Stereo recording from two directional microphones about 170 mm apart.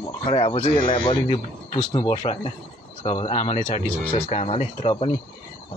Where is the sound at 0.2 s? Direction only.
35° left (ahead or behind).